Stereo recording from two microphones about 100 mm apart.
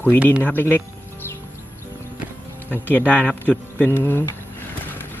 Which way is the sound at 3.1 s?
15° left (ahead or behind).